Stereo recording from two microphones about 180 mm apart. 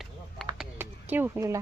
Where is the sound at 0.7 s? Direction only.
10° right (ahead or behind).